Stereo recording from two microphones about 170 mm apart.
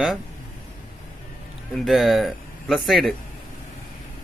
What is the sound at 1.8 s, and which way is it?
Speech, centre (ahead or behind).